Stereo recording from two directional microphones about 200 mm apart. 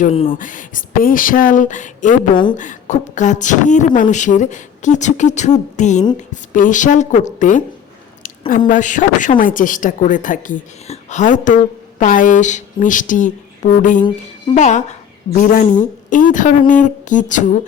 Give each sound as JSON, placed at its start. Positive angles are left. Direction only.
{"t": 0.0, "sound": "speech", "side_deg": 30}
{"t": 0.3, "sound": "a woman's voice", "side_deg": 40}